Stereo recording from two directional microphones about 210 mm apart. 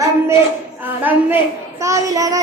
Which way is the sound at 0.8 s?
10° right (ahead or behind).